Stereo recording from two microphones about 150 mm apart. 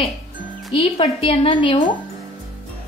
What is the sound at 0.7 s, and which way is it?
A woman's voice, 40° left (ahead or behind).